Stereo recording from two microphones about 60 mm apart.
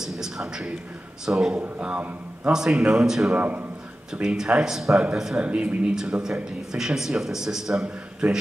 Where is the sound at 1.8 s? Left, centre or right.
Right.